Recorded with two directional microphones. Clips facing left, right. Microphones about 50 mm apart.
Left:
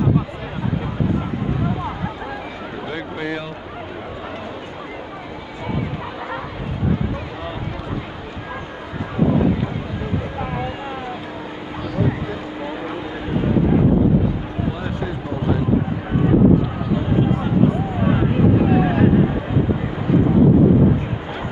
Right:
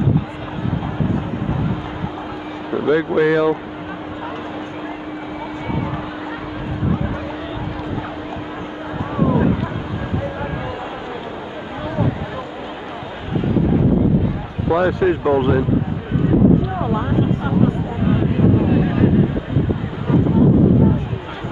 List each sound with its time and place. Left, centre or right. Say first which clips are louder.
3.2 s speech: right 10 dB; right
14.7 s speech: right 14 dB; right